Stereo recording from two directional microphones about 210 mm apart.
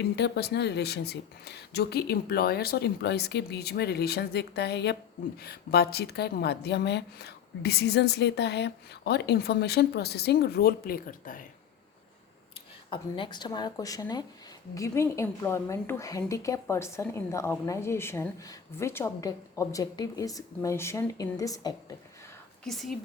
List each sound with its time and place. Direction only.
0.0 s a woman's voice: 50° left (ahead or behind)
12.9 s a woman's voice: 25° left (ahead or behind)
22.6 s speech: centre (ahead or behind)